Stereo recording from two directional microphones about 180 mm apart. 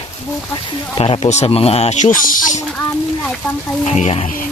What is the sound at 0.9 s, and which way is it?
Speech, 30° left (ahead or behind).